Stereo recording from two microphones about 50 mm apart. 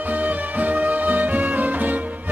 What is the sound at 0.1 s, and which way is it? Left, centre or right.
Music, right.